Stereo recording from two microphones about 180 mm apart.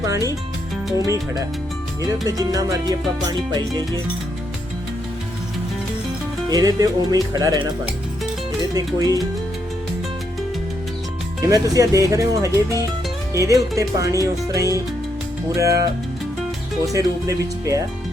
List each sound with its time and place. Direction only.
0.0 s speech: 20° right (ahead or behind)
2.2 s music: 20° right (ahead or behind)
6.5 s music: 20° right (ahead or behind)
8.7 s music: 20° right (ahead or behind)
11.4 s speech: 20° right (ahead or behind)
15.5 s music: 20° right (ahead or behind)